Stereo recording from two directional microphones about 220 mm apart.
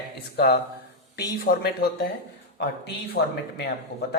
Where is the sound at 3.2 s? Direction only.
50° left (ahead or behind).